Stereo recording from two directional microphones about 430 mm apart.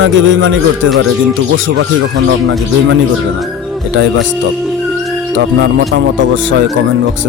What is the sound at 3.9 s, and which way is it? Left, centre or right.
Speech, right.